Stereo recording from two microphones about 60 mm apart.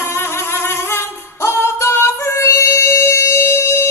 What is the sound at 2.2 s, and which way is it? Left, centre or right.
Music, left.